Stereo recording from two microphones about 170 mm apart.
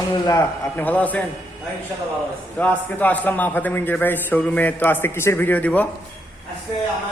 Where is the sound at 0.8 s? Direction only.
10° left (ahead or behind).